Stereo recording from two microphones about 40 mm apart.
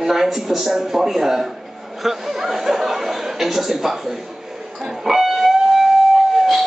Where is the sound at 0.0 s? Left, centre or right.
Centre.